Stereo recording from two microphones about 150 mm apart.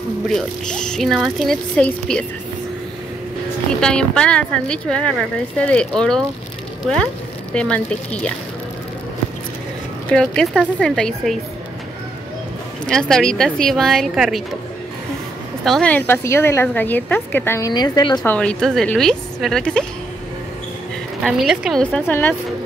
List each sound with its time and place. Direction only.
0.3 s a woman's voice: 5° left (ahead or behind)
3.8 s a woman's voice: 5° left (ahead or behind)
7.5 s a woman's voice: 5° left (ahead or behind)
10.0 s a woman's voice: 5° left (ahead or behind)
12.8 s a woman's voice: 5° left (ahead or behind)
15.6 s a woman's voice: 5° left (ahead or behind); by 18.2 s 25° left (ahead or behind)
18.2 s a woman's voice: 10° left (ahead or behind)
21.2 s a woman's voice: centre (ahead or behind)
22.0 s a woman's voice: 15° left (ahead or behind)